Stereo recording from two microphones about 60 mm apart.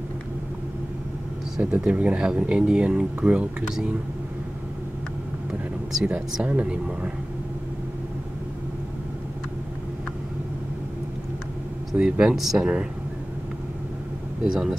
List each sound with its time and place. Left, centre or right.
1.6 s speech: centre
6.4 s speech: centre
11.9 s speech: centre
14.4 s speech: centre